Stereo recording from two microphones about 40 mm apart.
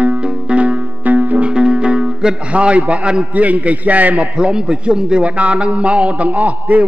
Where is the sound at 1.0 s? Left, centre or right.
Right.